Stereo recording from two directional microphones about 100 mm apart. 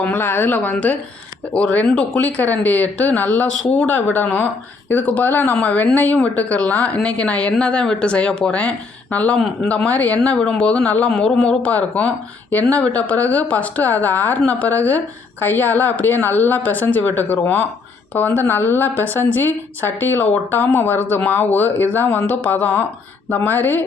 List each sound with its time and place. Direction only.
0.0 s a woman's voice: 20° left (ahead or behind)